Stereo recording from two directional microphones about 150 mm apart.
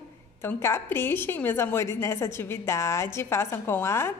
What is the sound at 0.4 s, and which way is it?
A woman's voice, 15° left (ahead or behind).